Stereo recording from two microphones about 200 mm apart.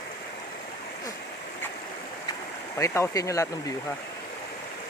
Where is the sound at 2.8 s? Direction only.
15° left (ahead or behind).